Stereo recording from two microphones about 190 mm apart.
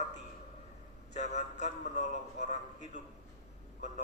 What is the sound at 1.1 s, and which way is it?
A man's voice, 35° left (ahead or behind).